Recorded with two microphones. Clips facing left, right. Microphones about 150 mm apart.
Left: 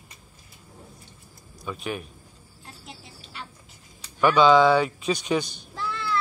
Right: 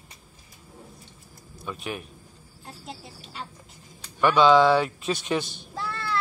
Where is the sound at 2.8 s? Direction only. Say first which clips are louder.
Right 6 dB; 35° right (ahead or behind).